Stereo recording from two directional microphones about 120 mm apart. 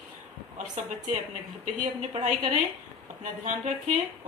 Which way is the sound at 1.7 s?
75° right (ahead or behind).